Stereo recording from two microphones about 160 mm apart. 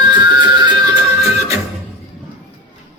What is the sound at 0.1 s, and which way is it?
Music, 30° right (ahead or behind).